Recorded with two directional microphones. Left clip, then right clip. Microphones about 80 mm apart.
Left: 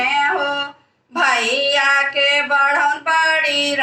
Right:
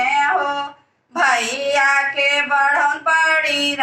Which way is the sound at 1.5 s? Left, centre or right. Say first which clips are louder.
Left 1 dB; left.